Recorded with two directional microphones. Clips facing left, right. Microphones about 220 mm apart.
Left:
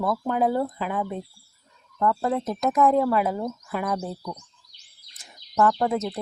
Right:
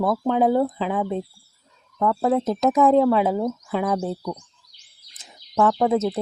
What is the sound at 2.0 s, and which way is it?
Speech, 10° right (ahead or behind).